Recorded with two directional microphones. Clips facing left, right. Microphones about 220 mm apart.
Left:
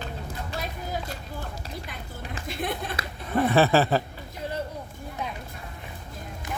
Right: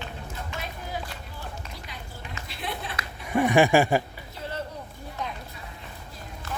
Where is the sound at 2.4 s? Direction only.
50° left (ahead or behind).